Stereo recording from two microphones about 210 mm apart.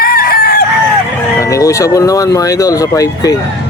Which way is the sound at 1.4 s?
15° left (ahead or behind).